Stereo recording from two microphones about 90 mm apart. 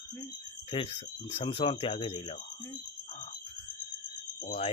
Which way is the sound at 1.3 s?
90° left.